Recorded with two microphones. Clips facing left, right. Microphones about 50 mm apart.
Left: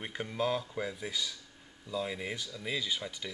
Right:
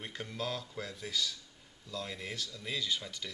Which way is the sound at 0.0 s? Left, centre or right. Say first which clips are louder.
Left 6 dB; centre.